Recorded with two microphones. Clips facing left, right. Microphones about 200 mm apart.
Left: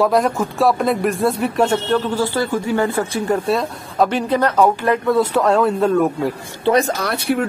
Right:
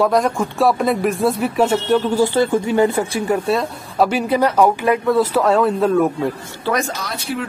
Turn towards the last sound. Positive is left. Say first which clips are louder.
# left 6 dB
turn(degrees=60)  # may be behind; listen again after turning